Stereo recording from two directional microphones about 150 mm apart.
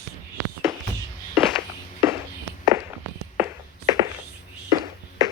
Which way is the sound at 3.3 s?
15° right (ahead or behind).